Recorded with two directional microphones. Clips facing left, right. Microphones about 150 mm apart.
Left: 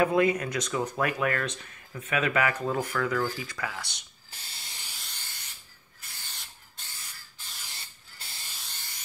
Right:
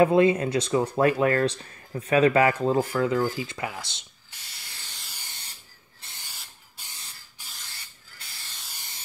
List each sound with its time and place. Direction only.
0.0 s speech: 25° right (ahead or behind)
4.6 s hiss: 15° left (ahead or behind)
4.9 s hiss: 5° right (ahead or behind)
5.9 s owl: 25° right (ahead or behind)
6.2 s a sound: 5° right (ahead or behind)
7.4 s spray: 10° right (ahead or behind)